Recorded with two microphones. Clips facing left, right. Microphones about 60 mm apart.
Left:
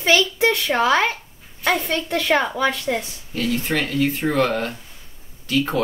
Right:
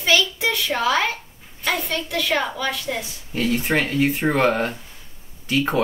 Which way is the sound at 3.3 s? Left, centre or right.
Right.